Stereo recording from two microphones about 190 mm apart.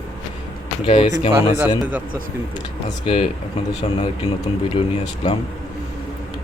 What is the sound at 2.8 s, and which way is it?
Speech, 30° left (ahead or behind).